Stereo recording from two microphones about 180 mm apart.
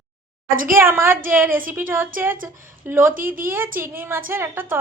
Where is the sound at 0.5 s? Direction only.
50° right (ahead or behind).